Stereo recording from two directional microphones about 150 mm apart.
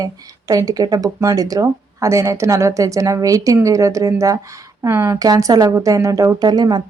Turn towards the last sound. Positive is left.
turn(degrees=-30)  # may be behind; listen again after turning